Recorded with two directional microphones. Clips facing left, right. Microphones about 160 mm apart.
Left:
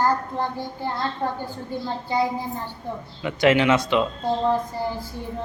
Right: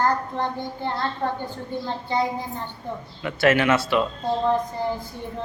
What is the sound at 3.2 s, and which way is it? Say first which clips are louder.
Speech: left 1 dB; 15° left (ahead or behind).